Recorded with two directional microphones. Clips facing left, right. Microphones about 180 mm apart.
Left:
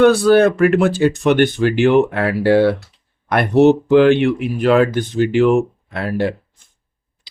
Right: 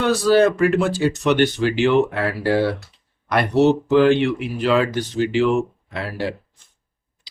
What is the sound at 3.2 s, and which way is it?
Speech, 55° left (ahead or behind).